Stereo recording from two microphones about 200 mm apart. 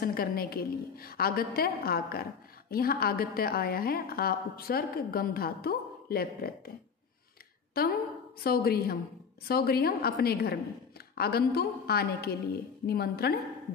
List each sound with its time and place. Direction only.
0.0 s a woman's voice: 50° left (ahead or behind)
7.8 s a woman's voice: 50° left (ahead or behind)